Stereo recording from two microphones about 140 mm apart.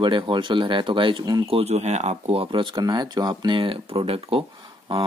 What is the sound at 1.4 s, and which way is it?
Speech, 45° right (ahead or behind).